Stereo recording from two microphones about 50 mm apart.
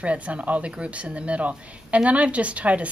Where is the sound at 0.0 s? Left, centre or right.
Right.